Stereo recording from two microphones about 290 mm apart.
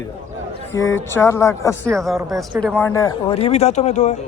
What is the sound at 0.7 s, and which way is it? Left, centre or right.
A man's voice, centre.